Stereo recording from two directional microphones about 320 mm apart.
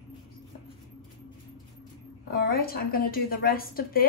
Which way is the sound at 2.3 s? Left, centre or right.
Left.